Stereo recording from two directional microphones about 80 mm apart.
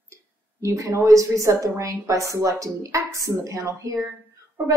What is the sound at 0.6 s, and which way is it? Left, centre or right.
A woman's voice, right.